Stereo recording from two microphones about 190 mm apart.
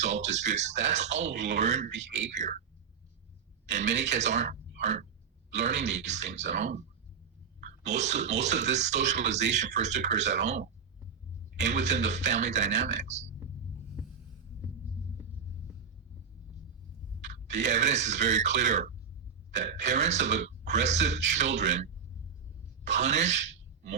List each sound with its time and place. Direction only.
0.0 s speech: 35° right (ahead or behind)
2.0 s speech: 70° right (ahead or behind)
2.3 s speech: 40° right (ahead or behind)
3.7 s speech: 40° right (ahead or behind)
17.2 s a sound: 40° right (ahead or behind)
17.8 s speech: 35° right (ahead or behind)
22.8 s speech: 35° right (ahead or behind)